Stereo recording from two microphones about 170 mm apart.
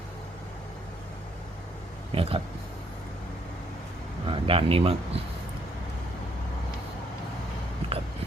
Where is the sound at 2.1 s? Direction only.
35° right (ahead or behind).